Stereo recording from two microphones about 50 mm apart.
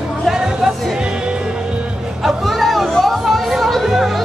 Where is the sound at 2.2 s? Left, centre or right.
Centre.